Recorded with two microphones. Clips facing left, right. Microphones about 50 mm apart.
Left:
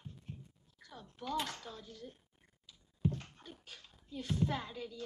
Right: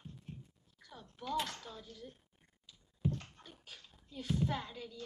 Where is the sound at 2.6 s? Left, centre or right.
Centre.